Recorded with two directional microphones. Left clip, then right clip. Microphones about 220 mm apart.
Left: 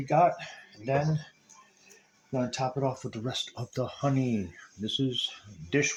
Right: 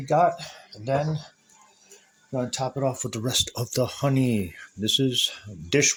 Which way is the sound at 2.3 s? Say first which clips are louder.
Right 2 dB; 30° right (ahead or behind).